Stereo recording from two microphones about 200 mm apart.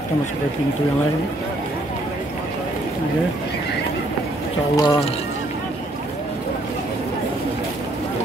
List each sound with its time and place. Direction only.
4.7 s speech: 20° left (ahead or behind)